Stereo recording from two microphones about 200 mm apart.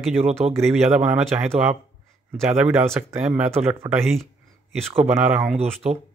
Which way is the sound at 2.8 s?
10° right (ahead or behind).